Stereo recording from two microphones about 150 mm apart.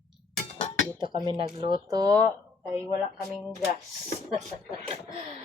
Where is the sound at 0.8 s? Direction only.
30° right (ahead or behind).